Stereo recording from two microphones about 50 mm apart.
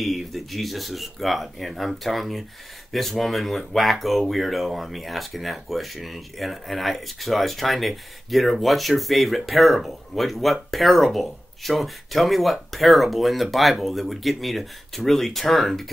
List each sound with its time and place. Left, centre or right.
0.0 s speech: centre